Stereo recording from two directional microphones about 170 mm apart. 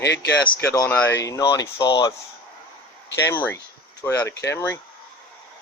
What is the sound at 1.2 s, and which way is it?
Speech, 20° left (ahead or behind).